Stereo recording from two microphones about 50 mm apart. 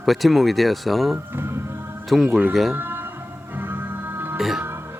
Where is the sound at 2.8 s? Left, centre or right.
Right.